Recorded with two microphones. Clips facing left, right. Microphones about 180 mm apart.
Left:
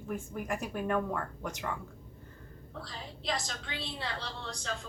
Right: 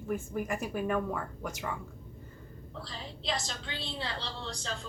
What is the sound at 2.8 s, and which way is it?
A woman's voice, 30° right (ahead or behind).